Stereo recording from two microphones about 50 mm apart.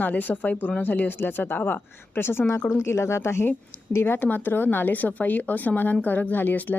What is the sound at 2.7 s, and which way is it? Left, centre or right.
A woman's voice, left.